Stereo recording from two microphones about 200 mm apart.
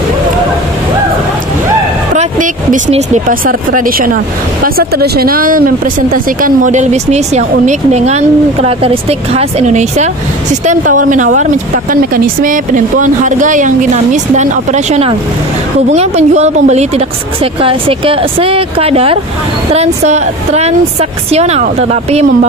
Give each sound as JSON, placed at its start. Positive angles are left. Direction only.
{"t": 2.1, "sound": "speech", "side_deg": -40}